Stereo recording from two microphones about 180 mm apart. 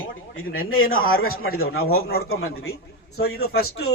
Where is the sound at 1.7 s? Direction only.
60° left (ahead or behind).